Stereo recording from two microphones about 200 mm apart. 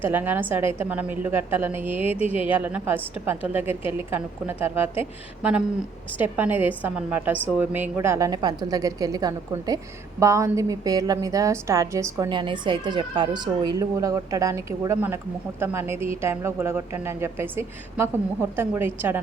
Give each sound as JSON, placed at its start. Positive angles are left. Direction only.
{"t": 0.0, "sound": "a woman's voice", "side_deg": -10}